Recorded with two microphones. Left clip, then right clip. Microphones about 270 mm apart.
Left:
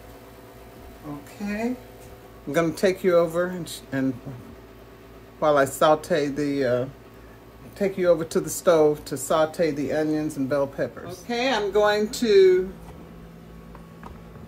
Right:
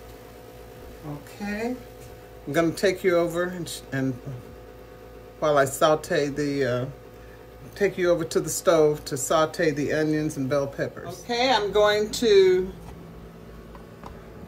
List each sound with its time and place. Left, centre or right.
1.4 s speech: left
5.4 s speech: centre
7.8 s speech: centre
11.2 s speech: centre